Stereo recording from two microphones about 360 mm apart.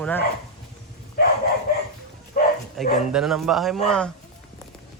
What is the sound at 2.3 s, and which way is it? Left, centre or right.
Bow-wow, left.